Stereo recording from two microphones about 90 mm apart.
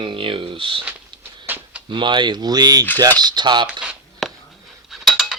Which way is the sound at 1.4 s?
20° right (ahead or behind).